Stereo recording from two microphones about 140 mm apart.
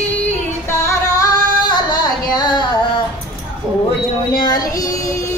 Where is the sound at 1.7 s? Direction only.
30° left (ahead or behind).